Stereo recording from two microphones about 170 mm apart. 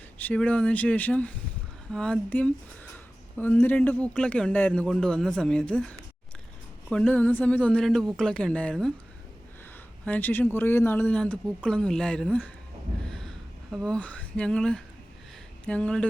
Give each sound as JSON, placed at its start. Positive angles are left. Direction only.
{"t": 0.2, "sound": "a man's voice", "side_deg": 10}
{"t": 10.1, "sound": "a man's voice", "side_deg": 10}
{"t": 13.1, "sound": "a sound", "side_deg": 5}
{"t": 15.6, "sound": "speech", "side_deg": 5}